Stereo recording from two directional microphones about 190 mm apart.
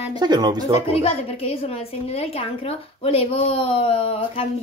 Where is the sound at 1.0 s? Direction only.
30° left (ahead or behind).